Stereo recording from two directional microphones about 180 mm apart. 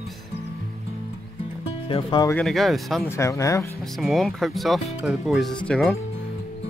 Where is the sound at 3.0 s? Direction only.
15° left (ahead or behind).